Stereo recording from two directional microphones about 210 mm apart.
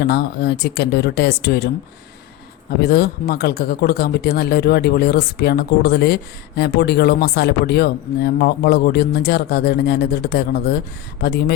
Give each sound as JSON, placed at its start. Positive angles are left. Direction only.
{"t": 0.0, "sound": "speech", "side_deg": 50}
{"t": 2.8, "sound": "speech", "side_deg": 50}